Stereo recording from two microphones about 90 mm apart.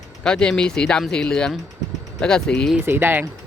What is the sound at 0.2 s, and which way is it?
Speech, 10° left (ahead or behind).